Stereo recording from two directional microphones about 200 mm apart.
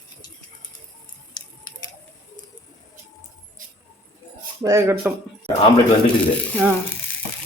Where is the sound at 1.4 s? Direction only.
20° left (ahead or behind).